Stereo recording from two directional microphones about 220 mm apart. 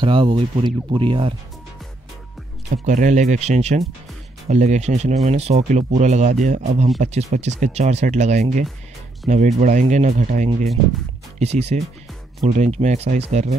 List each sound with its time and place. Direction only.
0.0 s speech: 20° right (ahead or behind)
2.7 s speech: 35° right (ahead or behind)